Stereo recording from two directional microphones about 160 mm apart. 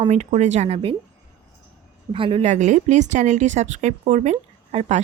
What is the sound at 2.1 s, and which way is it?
Speech, 35° right (ahead or behind).